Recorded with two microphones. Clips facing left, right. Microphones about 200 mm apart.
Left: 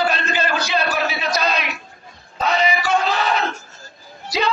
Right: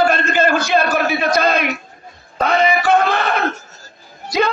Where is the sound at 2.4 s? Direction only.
55° right (ahead or behind).